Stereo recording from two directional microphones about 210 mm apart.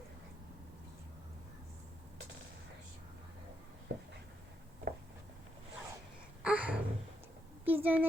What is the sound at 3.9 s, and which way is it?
Writing, 55° right (ahead or behind).